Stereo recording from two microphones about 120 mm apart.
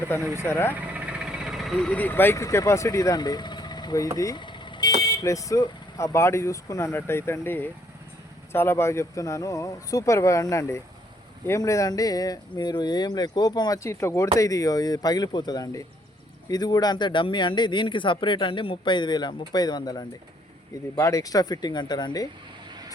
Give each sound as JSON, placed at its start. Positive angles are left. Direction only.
{"t": 0.3, "sound": "speech", "side_deg": 20}
{"t": 0.7, "sound": "vehicle", "side_deg": -10}
{"t": 1.9, "sound": "speech", "side_deg": 15}
{"t": 4.4, "sound": "vehicle", "side_deg": 40}
{"t": 5.0, "sound": "speech", "side_deg": 30}